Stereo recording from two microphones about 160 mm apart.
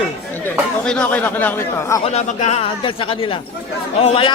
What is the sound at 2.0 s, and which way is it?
A man's voice, 45° left (ahead or behind).